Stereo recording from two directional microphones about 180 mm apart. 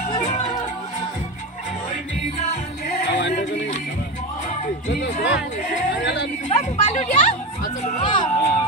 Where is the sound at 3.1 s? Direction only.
75° left (ahead or behind).